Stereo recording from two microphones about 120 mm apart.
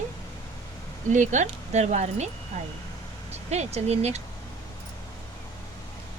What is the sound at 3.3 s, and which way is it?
Speech, 65° right (ahead or behind).